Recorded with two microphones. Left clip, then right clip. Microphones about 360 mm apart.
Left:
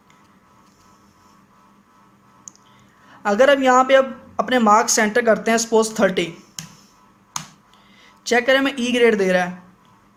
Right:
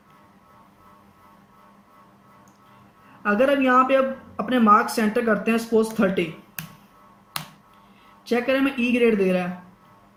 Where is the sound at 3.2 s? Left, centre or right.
Centre.